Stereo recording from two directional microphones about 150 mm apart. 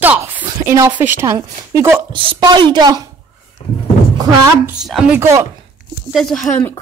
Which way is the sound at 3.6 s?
40° left (ahead or behind).